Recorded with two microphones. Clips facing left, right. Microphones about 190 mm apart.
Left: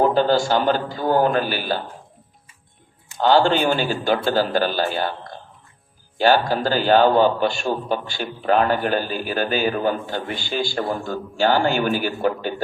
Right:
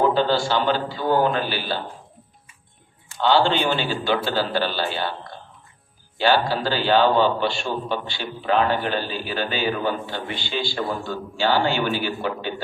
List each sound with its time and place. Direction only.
0.0 s a man's voice: 45° left (ahead or behind)
3.2 s a man's voice: 45° left (ahead or behind)
6.1 s a man's voice: 45° left (ahead or behind)